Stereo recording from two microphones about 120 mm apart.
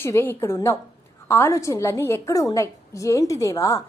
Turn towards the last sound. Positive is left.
turn(degrees=25)  # may be behind; listen again after turning